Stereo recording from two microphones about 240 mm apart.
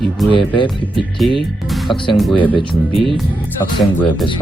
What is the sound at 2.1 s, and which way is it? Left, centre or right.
Speech, centre.